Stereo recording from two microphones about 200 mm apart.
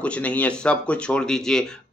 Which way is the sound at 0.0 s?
5° left (ahead or behind).